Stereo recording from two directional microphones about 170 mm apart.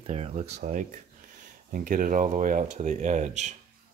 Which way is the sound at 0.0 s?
40° right (ahead or behind).